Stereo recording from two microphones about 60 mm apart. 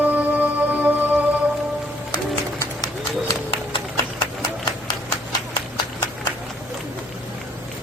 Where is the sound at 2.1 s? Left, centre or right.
Left.